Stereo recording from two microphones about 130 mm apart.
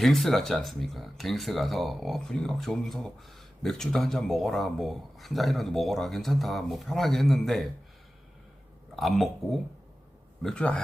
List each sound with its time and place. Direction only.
0.0 s speech: centre (ahead or behind)
9.0 s a man's voice: centre (ahead or behind)